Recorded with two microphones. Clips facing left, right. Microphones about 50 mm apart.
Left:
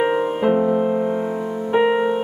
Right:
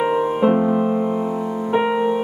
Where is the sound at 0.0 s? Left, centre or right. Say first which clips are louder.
Even; left.